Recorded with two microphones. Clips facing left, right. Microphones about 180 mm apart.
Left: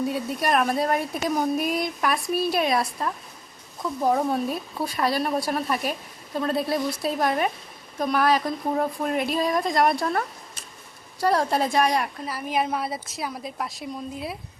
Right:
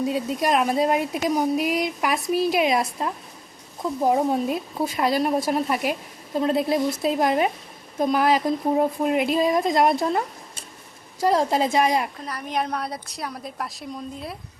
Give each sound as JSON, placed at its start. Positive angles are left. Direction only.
{"t": 0.0, "sound": "a woman's voice", "side_deg": -15}
{"t": 12.2, "sound": "a woman's voice", "side_deg": 5}